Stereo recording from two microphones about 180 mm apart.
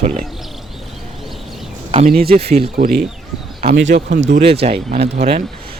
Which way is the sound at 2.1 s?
60° right (ahead or behind).